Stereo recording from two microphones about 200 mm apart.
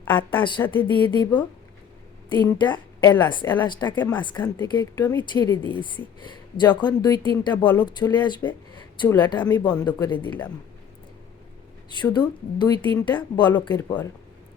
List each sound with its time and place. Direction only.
0.0 s a woman's voice: 10° left (ahead or behind)
1.1 s a woman's voice: 20° left (ahead or behind)
11.9 s speech: 20° left (ahead or behind)